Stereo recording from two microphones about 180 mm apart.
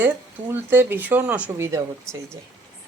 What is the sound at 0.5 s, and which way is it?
Speech, 10° right (ahead or behind).